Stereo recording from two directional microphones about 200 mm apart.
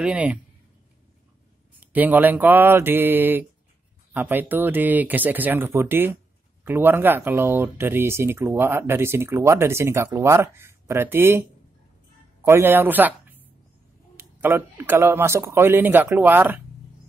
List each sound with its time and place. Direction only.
0.0 s speech: 5° right (ahead or behind)
1.8 s speech: 10° right (ahead or behind)
12.4 s speech: 10° right (ahead or behind)